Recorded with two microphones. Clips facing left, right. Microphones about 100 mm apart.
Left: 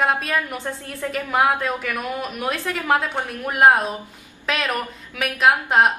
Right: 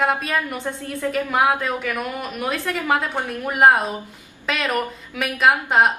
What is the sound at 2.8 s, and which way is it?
A woman's voice, centre (ahead or behind).